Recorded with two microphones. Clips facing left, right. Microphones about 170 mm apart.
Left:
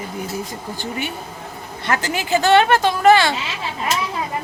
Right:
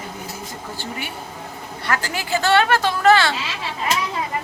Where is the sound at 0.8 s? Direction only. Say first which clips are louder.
Left 5 dB; 20° left (ahead or behind).